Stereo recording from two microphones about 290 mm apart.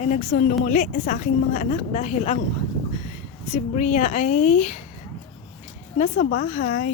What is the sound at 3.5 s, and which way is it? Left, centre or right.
A woman's voice, left.